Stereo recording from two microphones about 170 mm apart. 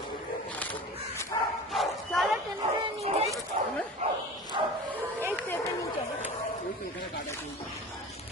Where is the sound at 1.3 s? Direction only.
30° left (ahead or behind).